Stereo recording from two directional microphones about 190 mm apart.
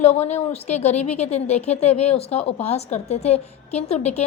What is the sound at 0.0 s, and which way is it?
A woman's voice, 35° left (ahead or behind).